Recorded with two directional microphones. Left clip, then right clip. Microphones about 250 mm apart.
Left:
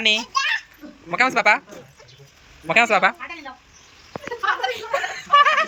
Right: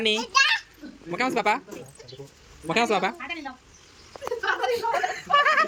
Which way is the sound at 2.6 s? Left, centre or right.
Centre.